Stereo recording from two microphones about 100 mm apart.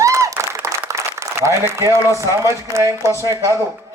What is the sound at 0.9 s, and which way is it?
Applause, 30° right (ahead or behind).